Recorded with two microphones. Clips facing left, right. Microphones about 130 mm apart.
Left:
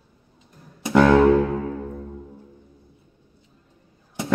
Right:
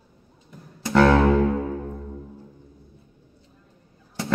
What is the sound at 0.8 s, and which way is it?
Music, 15° left (ahead or behind).